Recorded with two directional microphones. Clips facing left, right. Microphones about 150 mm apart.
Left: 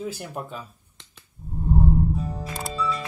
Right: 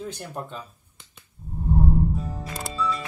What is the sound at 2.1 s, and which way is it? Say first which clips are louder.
Music: left 2 dB; centre (ahead or behind).